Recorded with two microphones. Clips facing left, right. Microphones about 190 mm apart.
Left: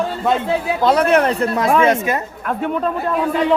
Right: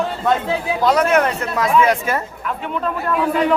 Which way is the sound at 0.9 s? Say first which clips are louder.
Left 1 dB; 30° left (ahead or behind).